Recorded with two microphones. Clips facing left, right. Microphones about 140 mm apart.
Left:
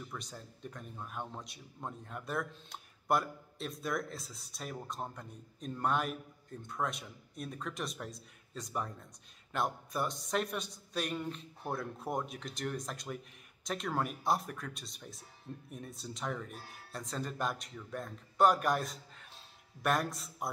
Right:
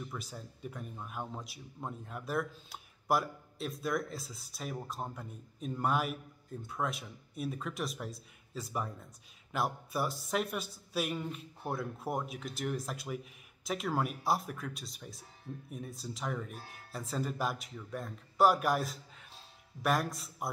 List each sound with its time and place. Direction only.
0.1 s a man's voice: 5° right (ahead or behind)